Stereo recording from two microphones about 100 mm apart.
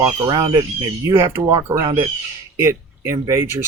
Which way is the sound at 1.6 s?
35° right (ahead or behind).